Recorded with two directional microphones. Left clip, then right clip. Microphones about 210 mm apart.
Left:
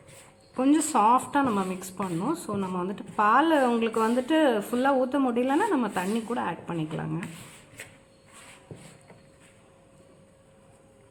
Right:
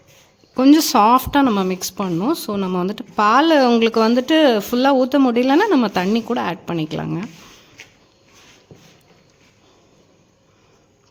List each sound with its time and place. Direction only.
0.5 s speech: 50° right (ahead or behind)